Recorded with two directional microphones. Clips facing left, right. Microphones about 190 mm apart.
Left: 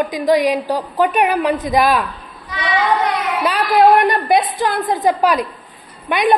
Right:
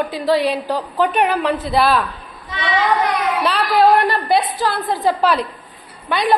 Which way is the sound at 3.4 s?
15° left (ahead or behind).